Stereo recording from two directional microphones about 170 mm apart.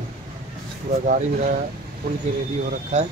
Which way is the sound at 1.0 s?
50° right (ahead or behind).